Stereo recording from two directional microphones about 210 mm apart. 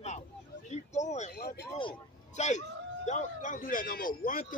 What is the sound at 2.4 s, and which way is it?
A man's voice, 35° left (ahead or behind).